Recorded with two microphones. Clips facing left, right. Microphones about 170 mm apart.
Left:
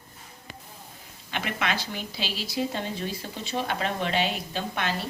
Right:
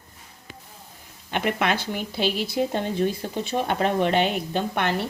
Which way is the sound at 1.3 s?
50° right (ahead or behind).